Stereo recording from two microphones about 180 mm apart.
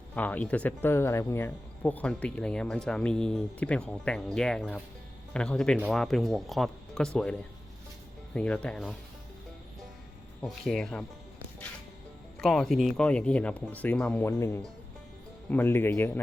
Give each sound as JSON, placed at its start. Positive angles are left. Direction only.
{"t": 0.2, "sound": "speech", "side_deg": 10}
{"t": 10.4, "sound": "speech", "side_deg": 0}
{"t": 12.4, "sound": "speech", "side_deg": 0}
{"t": 14.3, "sound": "speech", "side_deg": 15}